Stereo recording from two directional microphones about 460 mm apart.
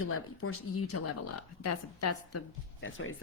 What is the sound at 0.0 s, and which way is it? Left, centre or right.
A woman's voice, left.